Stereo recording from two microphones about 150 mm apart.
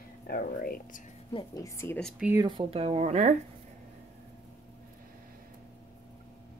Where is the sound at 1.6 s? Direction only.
15° left (ahead or behind).